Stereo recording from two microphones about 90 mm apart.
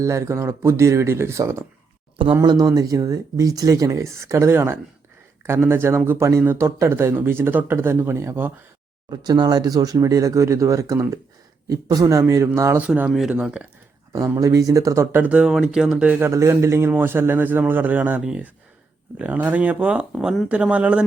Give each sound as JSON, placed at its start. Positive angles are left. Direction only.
{"t": 0.0, "sound": "speech", "side_deg": -35}
{"t": 2.4, "sound": "speech", "side_deg": -45}
{"t": 9.0, "sound": "speech", "side_deg": -50}
{"t": 12.8, "sound": "speech", "side_deg": -15}
{"t": 13.1, "sound": "speech", "side_deg": -5}
{"t": 13.3, "sound": "speech", "side_deg": -15}
{"t": 14.1, "sound": "speech", "side_deg": -35}
{"t": 15.1, "sound": "speech", "side_deg": -15}
{"t": 16.2, "sound": "speech", "side_deg": -35}
{"t": 19.2, "sound": "speech", "side_deg": -15}